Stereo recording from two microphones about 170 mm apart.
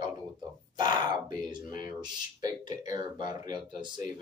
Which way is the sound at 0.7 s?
25° right (ahead or behind).